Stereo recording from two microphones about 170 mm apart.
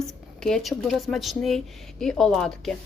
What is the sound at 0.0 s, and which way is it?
Speech, centre (ahead or behind).